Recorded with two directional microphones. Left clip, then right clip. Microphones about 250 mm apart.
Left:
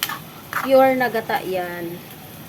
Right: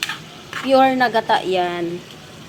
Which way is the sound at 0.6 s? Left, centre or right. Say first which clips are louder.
Right 1 dB; centre.